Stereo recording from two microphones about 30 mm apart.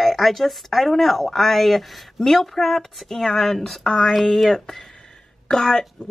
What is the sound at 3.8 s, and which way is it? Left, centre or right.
Speech, left.